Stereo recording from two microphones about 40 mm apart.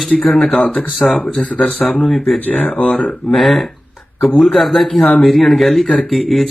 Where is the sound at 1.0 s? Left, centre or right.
Centre.